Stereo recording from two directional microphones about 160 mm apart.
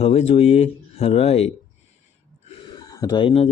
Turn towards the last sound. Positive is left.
turn(degrees=35)  # may be behind; listen again after turning